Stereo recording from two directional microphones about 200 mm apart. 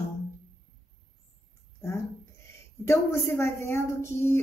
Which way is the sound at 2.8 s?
15° left (ahead or behind).